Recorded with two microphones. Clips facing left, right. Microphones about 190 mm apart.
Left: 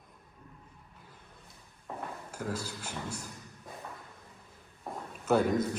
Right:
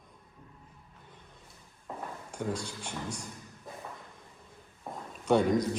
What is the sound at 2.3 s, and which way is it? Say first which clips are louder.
Speech: right 3 dB; 5° left (ahead or behind).